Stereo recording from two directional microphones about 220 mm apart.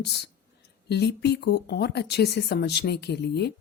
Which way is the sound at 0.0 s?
50° left (ahead or behind).